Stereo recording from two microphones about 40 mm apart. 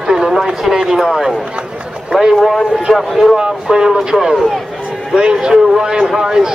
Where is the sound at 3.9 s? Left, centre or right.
Centre.